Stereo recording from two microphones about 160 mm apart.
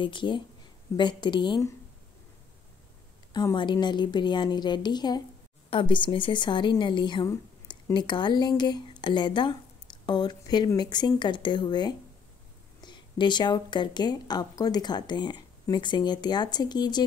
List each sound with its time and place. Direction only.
0.0 s a woman's voice: 30° left (ahead or behind)
3.3 s a woman's voice: 25° left (ahead or behind)